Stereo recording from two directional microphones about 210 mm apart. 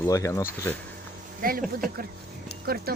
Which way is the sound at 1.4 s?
45° right (ahead or behind).